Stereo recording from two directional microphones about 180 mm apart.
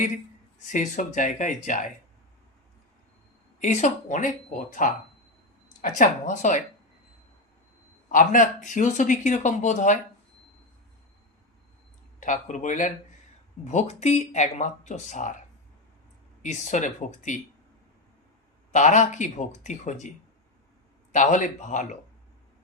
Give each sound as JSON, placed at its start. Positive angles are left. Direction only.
{"t": 0.7, "sound": "speech", "side_deg": 45}
{"t": 3.6, "sound": "speech", "side_deg": 40}
{"t": 8.1, "sound": "speech", "side_deg": 45}
{"t": 12.2, "sound": "speech", "side_deg": 45}
{"t": 16.4, "sound": "speech", "side_deg": 40}
{"t": 18.7, "sound": "speech", "side_deg": 45}
{"t": 21.1, "sound": "speech", "side_deg": 45}